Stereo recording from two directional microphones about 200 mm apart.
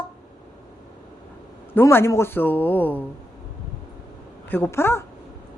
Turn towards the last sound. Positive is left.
turn(degrees=15)  # may be behind; listen again after turning